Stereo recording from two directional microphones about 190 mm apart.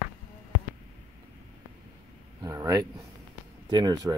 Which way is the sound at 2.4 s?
20° right (ahead or behind).